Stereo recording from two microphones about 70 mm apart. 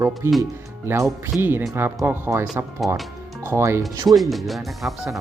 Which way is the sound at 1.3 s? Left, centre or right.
Right.